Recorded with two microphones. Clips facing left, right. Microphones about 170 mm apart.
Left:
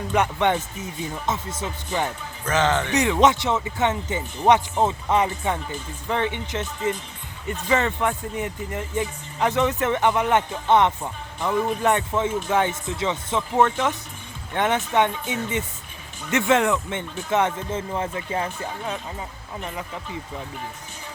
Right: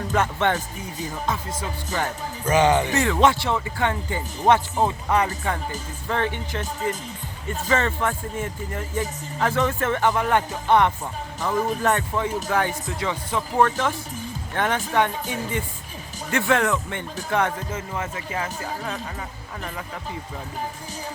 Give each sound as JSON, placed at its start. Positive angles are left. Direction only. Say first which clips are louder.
{"t": 0.1, "sound": "speech", "louder": "left 2 dB", "side_deg": 15}
{"t": 2.4, "sound": "speech", "louder": "right 3 dB", "side_deg": -10}
{"t": 2.9, "sound": "speech", "louder": "left 1 dB", "side_deg": 20}